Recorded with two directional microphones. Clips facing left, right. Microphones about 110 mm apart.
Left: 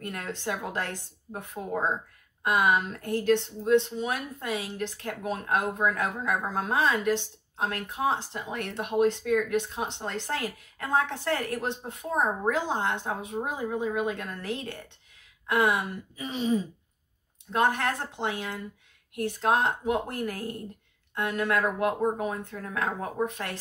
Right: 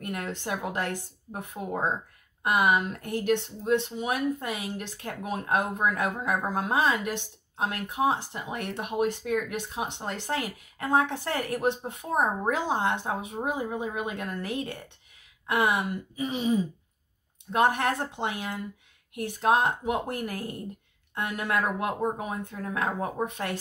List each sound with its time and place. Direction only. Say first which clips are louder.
0.0 s speech: right 1 dB; 15° right (ahead or behind)